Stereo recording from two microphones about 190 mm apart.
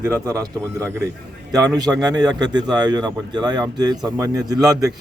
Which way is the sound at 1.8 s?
20° right (ahead or behind).